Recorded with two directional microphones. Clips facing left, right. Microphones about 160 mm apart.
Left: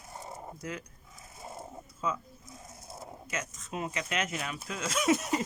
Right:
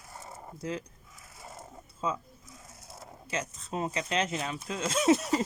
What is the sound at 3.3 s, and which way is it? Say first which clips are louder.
Speech: right 4 dB; 30° right (ahead or behind).